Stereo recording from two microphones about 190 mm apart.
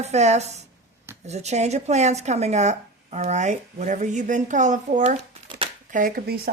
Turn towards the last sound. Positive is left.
turn(degrees=-50)  # may be behind; listen again after turning